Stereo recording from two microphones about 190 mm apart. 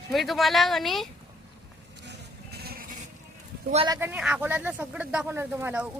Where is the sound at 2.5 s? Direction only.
55° right (ahead or behind).